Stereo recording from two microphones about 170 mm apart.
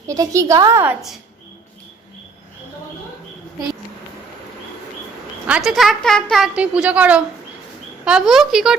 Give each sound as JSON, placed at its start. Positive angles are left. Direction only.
{"t": 0.1, "sound": "a woman's voice", "side_deg": -20}
{"t": 5.5, "sound": "a woman's voice", "side_deg": -5}